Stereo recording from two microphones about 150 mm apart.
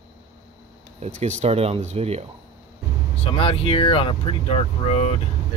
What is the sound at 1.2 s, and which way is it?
Speech, 45° right (ahead or behind).